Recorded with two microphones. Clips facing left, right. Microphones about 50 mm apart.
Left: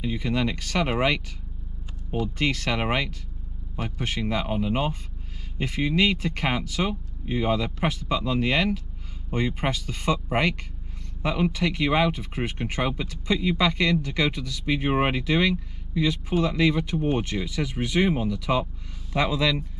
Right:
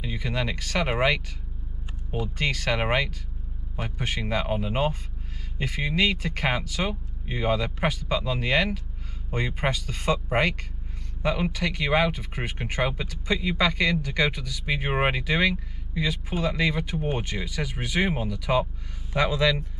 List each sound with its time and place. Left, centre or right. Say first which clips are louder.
0.0 s speech: left 4 dB; centre
5.6 s speech: left 2 dB; centre
11.6 s speech: even; centre
19.1 s speech: right 1 dB; centre